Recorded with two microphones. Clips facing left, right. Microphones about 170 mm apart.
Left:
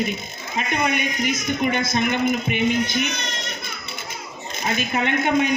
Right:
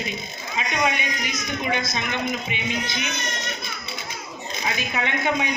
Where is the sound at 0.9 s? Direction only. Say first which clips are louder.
Left 5 dB; 50° left (ahead or behind).